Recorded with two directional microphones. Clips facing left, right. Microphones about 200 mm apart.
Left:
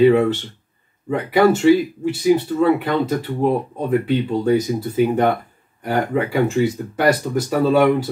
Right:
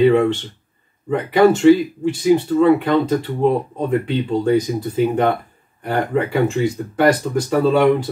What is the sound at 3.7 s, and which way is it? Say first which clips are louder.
Speech: left 1 dB; 5° left (ahead or behind).